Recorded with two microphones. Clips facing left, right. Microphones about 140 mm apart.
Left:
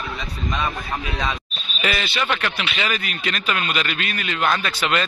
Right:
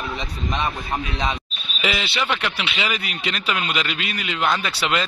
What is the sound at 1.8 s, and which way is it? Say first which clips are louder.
Speech: even; 15° right (ahead or behind).